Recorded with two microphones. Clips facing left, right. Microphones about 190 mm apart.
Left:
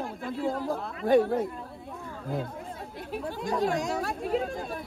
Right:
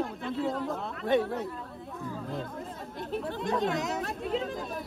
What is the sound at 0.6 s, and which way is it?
Speech, 35° left (ahead or behind).